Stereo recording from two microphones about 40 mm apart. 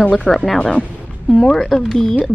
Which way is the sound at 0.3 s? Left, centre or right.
Centre.